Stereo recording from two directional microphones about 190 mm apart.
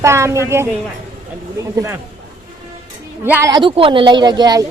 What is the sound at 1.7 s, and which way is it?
Speech, 15° right (ahead or behind).